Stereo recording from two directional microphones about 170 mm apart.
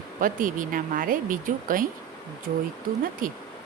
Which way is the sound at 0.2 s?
50° right (ahead or behind).